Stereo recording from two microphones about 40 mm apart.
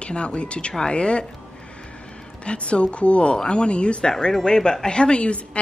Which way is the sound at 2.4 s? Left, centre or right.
Left.